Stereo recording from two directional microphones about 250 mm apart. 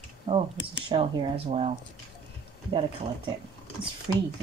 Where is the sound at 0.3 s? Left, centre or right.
Centre.